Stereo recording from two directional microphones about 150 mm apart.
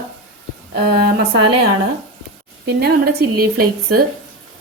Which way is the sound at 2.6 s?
90° right.